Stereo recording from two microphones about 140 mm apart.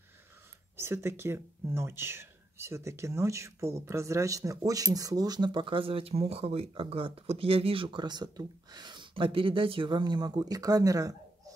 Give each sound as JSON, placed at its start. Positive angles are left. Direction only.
{"t": 0.7, "sound": "speech", "side_deg": -20}